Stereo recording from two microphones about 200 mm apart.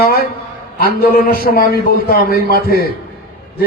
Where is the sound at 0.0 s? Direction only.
50° left (ahead or behind).